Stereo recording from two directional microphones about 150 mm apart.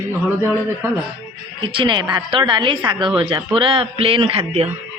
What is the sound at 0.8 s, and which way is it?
Speech, 15° right (ahead or behind).